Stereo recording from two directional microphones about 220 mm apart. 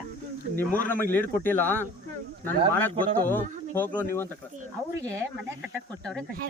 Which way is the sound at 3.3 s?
10° left (ahead or behind).